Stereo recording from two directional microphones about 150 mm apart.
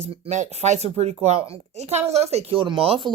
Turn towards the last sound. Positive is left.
turn(degrees=-35)  # may be behind; listen again after turning